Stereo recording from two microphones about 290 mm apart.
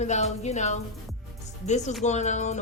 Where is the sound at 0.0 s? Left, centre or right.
Left.